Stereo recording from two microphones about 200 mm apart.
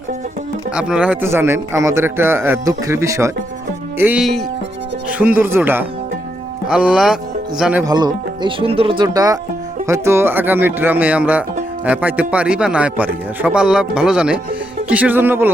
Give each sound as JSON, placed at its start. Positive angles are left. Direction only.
{"t": 0.7, "sound": "a man's voice", "side_deg": -5}
{"t": 7.9, "sound": "a man's voice", "side_deg": -20}